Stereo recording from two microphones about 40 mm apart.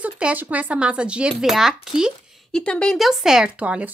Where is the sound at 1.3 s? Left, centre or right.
Centre.